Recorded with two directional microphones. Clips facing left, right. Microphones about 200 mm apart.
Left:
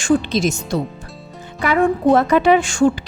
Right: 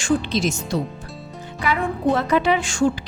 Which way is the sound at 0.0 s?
45° left (ahead or behind).